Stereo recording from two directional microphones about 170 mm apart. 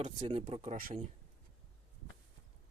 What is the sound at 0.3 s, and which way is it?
Speech, 35° right (ahead or behind).